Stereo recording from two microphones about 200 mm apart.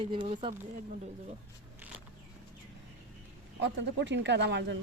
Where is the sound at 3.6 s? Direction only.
65° right (ahead or behind).